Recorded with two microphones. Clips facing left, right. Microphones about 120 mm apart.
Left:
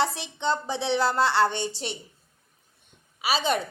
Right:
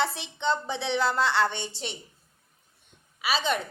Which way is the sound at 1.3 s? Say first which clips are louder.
Left 3 dB; 5° left (ahead or behind).